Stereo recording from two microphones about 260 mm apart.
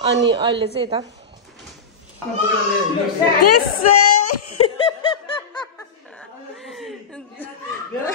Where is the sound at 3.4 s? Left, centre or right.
Left.